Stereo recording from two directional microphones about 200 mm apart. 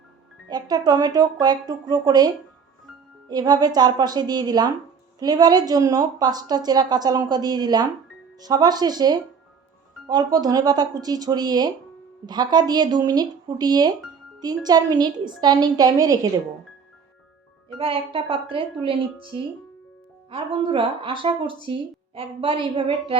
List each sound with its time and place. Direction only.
0.4 s speech: 20° right (ahead or behind)
17.7 s speech: 25° right (ahead or behind)